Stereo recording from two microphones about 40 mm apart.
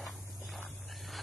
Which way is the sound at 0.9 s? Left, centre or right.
Centre.